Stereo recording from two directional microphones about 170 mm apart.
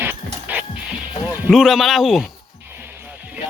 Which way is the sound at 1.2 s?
10° right (ahead or behind).